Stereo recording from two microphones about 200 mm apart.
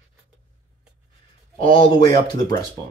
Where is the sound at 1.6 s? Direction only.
25° left (ahead or behind).